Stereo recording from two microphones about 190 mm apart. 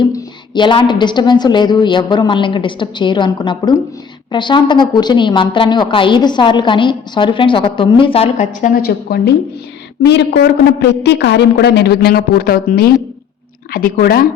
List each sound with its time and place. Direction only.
0.0 s a woman's voice: 25° left (ahead or behind); by 14.3 s 50° left (ahead or behind)